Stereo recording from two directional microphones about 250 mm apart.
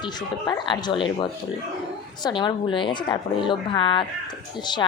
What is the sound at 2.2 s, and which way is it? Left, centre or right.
A woman's voice, centre.